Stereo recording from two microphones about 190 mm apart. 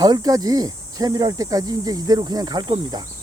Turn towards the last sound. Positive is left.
turn(degrees=-20)  # may be behind; listen again after turning